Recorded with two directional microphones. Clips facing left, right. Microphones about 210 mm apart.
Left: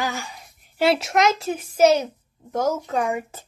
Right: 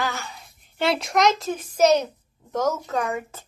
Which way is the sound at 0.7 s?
5° left (ahead or behind).